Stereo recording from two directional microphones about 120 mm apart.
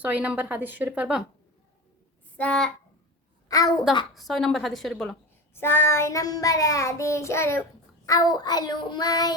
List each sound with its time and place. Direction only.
0.0 s a woman's voice: 15° right (ahead or behind)
2.4 s speech: 5° left (ahead or behind)
3.5 s a child's voice: 30° left (ahead or behind)
4.1 s a woman's voice: centre (ahead or behind)
5.5 s child singing: 20° left (ahead or behind)